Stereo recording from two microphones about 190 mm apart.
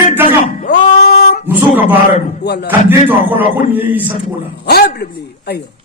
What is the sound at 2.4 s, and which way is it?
Speech, 60° left (ahead or behind).